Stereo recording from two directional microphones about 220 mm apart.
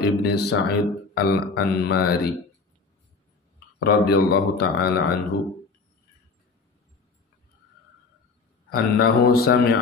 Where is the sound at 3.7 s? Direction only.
45° left (ahead or behind).